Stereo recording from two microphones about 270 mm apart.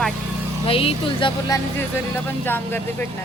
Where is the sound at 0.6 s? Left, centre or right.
Left.